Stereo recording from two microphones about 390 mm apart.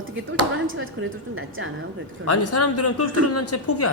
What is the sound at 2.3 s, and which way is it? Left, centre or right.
Speech, left.